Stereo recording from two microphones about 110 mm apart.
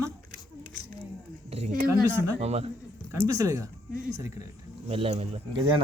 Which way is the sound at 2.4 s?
80° right.